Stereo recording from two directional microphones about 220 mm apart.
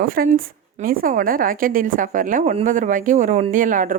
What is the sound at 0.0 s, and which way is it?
A woman's voice, 40° right (ahead or behind).